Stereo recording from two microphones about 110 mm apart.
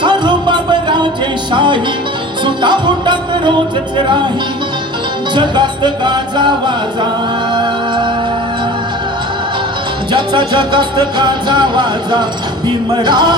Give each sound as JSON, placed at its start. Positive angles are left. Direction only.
{"t": 0.0, "sound": "a sound", "side_deg": -45}
{"t": 1.5, "sound": "music", "side_deg": -45}
{"t": 5.3, "sound": "music", "side_deg": -45}
{"t": 10.1, "sound": "music", "side_deg": -45}